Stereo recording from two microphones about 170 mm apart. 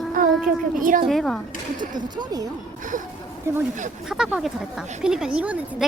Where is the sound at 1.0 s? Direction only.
Centre (ahead or behind).